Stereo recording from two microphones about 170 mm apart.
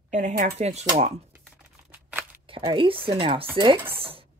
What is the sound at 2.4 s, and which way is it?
Speech, 30° right (ahead or behind).